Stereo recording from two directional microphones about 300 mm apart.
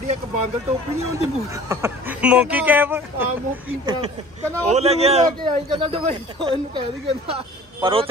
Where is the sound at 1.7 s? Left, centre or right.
Centre.